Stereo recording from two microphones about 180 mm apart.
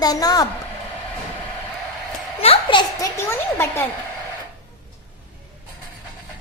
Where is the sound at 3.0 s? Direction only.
15° left (ahead or behind).